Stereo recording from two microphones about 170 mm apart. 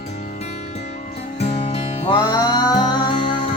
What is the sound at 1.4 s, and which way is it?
Music, 35° left (ahead or behind).